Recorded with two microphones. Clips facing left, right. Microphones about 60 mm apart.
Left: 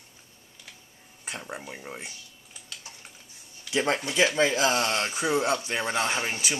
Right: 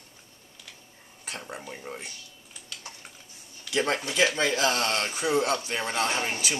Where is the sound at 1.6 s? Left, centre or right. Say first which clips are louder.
Even; centre.